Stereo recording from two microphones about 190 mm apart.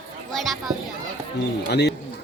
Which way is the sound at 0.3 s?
Centre (ahead or behind).